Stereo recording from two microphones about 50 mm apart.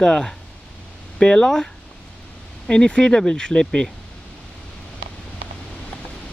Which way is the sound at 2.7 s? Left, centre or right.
Centre.